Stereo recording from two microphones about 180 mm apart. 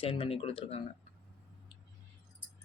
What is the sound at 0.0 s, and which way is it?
Speech, 30° left (ahead or behind).